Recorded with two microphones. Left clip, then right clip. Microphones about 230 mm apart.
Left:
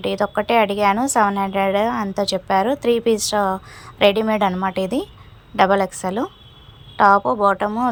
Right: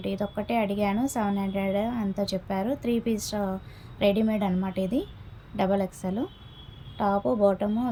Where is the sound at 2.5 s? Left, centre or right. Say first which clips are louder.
Left 12 dB; left.